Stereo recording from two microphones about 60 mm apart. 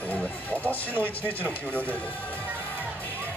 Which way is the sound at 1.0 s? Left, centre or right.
Left.